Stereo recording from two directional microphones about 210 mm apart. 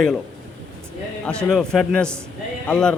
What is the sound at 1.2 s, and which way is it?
A man's voice, 5° left (ahead or behind).